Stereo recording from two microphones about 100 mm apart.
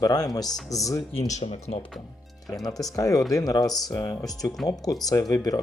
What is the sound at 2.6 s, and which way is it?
Speech, 35° left (ahead or behind).